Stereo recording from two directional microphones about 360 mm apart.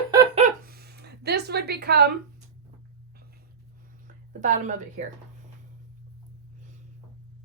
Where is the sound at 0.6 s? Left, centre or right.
Right.